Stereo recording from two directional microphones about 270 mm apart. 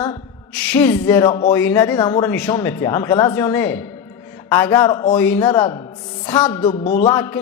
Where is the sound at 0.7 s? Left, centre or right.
Centre.